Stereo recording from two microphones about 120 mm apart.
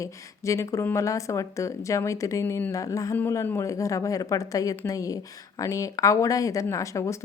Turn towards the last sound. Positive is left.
turn(degrees=25)  # may be behind; listen again after turning